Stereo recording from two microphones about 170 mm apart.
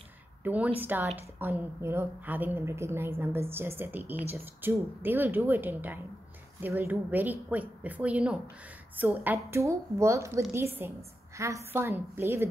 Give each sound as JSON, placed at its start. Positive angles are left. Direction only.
{"t": 0.4, "sound": "a woman's voice", "side_deg": -10}